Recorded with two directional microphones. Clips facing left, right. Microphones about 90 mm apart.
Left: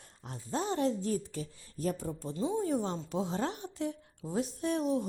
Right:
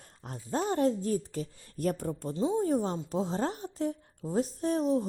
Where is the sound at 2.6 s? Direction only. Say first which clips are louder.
Right 3 dB; 40° right (ahead or behind).